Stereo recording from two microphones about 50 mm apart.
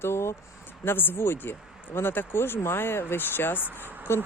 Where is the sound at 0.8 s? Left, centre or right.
Left.